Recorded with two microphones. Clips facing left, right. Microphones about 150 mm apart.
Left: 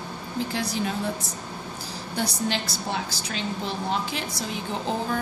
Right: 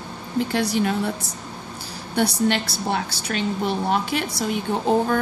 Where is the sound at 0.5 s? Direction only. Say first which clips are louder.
Right 7 dB; 70° right (ahead or behind).